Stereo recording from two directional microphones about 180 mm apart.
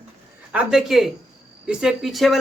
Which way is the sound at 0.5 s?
5° right (ahead or behind).